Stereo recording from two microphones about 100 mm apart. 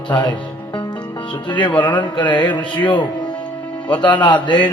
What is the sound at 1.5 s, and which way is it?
Speech, 50° left (ahead or behind).